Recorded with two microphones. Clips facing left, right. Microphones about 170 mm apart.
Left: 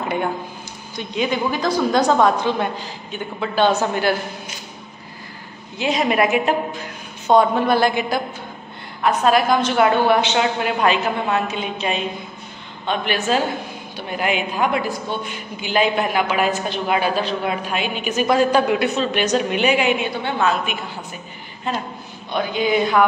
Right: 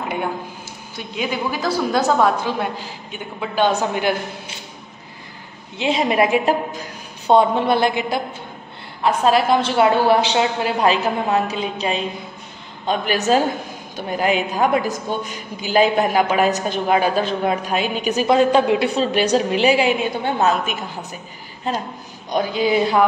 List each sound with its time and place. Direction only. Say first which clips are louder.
0.9 s a woman's voice: left 3 dB; 5° right (ahead or behind)
5.8 s a woman's voice: right 1 dB; 25° right (ahead or behind)
18.3 s a woman's voice: right 2 dB; 25° right (ahead or behind)